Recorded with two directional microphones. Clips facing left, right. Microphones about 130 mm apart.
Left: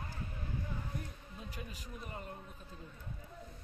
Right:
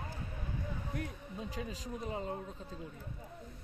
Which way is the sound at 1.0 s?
90° right.